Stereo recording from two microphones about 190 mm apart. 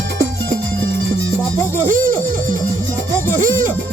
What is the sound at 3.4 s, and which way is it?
Music, 45° right (ahead or behind).